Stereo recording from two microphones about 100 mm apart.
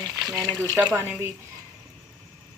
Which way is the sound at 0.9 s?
20° right (ahead or behind).